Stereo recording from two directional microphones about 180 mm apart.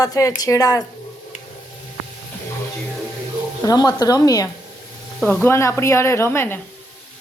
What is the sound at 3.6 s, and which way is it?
Speech, 20° left (ahead or behind).